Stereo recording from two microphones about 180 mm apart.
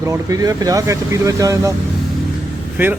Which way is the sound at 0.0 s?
20° right (ahead or behind).